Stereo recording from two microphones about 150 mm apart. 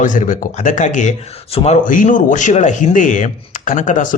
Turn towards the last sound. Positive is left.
turn(degrees=55)  # may be behind; listen again after turning